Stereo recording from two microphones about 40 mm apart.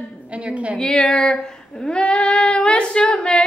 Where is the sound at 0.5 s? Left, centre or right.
Right.